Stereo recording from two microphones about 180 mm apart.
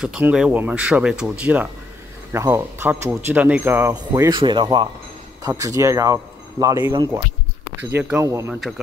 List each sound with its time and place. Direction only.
0.0 s speech: 5° right (ahead or behind)
4.1 s speech: 25° right (ahead or behind)